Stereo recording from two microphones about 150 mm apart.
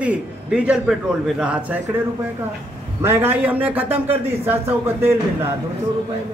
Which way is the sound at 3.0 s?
15° right (ahead or behind).